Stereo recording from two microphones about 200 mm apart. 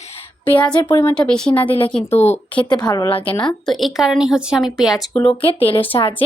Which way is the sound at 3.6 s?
Centre (ahead or behind).